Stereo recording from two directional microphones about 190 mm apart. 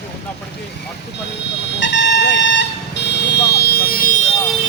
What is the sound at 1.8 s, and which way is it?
Vehicle, 65° left (ahead or behind).